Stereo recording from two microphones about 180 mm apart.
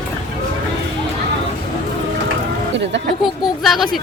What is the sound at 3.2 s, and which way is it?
Speech, centre (ahead or behind).